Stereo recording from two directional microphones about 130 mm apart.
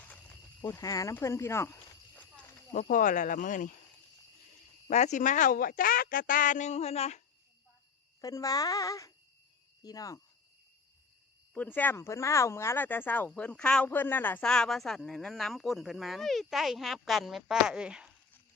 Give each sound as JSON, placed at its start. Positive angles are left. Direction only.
{"t": 0.6, "sound": "a child's voice", "side_deg": 25}
{"t": 2.7, "sound": "speech", "side_deg": 85}
{"t": 4.9, "sound": "speech", "side_deg": 60}
{"t": 8.2, "sound": "a child's voice", "side_deg": 25}
{"t": 11.5, "sound": "speech", "side_deg": 15}